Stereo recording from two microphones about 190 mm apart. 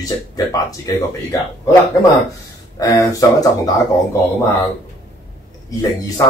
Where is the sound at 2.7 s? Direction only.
15° left (ahead or behind).